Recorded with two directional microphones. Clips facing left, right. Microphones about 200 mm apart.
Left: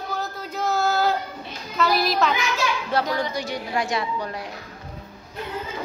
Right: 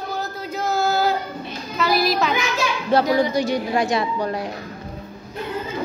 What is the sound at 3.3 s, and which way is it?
A woman's voice, 30° right (ahead or behind).